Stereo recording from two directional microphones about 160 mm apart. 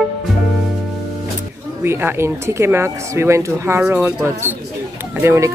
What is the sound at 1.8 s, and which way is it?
Speech, 15° right (ahead or behind).